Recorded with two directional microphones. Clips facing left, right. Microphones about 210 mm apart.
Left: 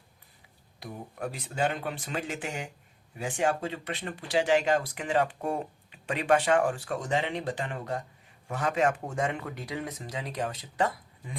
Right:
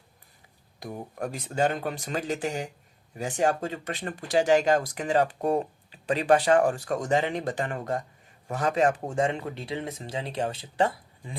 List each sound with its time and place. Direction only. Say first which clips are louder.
0.8 s speech: right 3 dB; 45° right (ahead or behind); by 11.3 s 30° right (ahead or behind)